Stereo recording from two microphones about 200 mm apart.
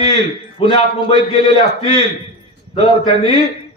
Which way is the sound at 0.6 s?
25° left (ahead or behind).